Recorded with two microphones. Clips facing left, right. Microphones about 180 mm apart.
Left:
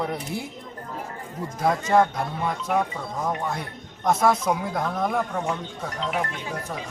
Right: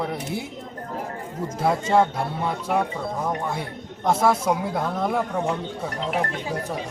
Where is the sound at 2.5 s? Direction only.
10° right (ahead or behind).